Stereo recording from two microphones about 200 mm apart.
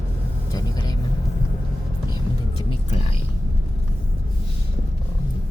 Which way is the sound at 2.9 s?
30° left (ahead or behind).